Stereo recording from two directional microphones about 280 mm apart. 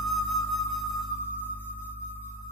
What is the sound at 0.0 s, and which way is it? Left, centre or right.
Music, centre.